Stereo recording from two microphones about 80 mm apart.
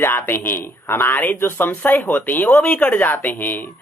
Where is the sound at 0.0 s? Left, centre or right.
Left.